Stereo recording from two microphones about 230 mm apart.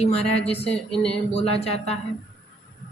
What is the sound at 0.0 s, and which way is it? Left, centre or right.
Speech, left.